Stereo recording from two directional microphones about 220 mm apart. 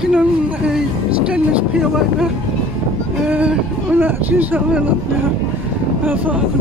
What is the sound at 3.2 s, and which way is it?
Speech, 5° right (ahead or behind).